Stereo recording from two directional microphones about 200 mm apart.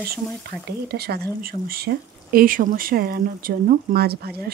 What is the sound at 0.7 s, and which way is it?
Speech, 55° right (ahead or behind).